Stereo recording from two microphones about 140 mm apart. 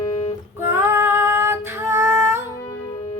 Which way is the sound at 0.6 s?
15° right (ahead or behind).